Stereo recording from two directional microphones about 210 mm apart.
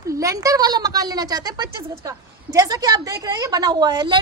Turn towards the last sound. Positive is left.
turn(degrees=-20)  # may be behind; listen again after turning